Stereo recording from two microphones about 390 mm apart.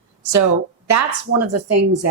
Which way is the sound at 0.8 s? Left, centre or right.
Right.